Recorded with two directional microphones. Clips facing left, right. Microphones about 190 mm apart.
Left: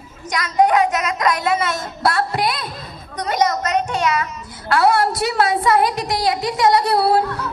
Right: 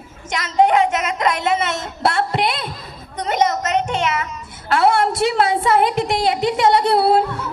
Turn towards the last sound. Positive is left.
turn(degrees=-25)  # may be behind; listen again after turning